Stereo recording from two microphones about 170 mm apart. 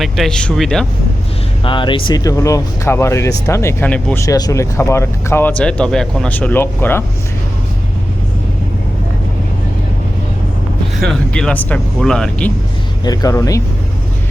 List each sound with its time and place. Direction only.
0.0 s speech: centre (ahead or behind)
1.6 s speech: 30° left (ahead or behind); by 7.0 s 10° left (ahead or behind)
11.0 s speech: 5° left (ahead or behind)
13.1 s speech: 20° left (ahead or behind)